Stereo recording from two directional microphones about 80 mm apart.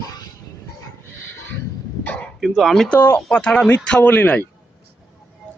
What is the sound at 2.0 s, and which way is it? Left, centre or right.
Dog, centre.